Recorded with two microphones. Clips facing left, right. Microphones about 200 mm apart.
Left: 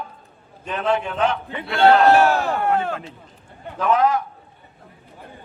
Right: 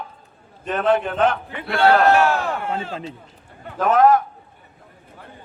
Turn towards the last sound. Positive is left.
turn(degrees=-50)  # may be behind; listen again after turning